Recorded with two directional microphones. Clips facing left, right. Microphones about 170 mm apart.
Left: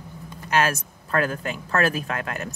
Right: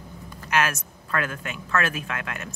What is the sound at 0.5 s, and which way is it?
Speech, 35° left (ahead or behind).